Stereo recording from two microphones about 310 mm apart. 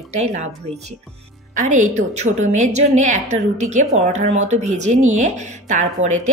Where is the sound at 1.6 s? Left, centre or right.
Right.